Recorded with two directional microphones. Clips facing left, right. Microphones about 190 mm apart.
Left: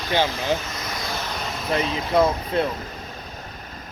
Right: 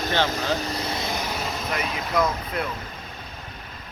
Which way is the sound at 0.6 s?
30° right (ahead or behind).